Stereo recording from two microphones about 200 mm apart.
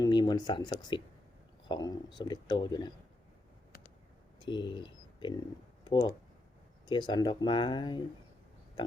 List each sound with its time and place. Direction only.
0.0 s speech: 20° left (ahead or behind)
4.4 s speech: 25° left (ahead or behind)